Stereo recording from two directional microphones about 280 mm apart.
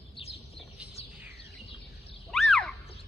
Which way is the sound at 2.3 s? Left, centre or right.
Centre.